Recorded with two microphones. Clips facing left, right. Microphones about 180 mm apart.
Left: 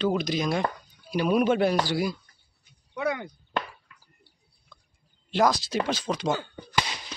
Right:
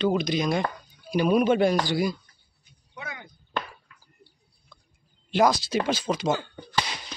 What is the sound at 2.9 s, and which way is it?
Speech, 70° left (ahead or behind).